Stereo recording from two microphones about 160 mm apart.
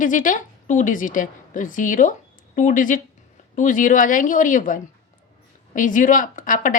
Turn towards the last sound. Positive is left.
turn(degrees=55)  # may be behind; listen again after turning